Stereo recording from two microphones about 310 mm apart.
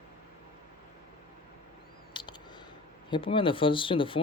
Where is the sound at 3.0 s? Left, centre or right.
Centre.